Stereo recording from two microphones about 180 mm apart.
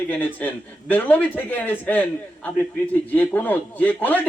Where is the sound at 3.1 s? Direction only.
10° left (ahead or behind).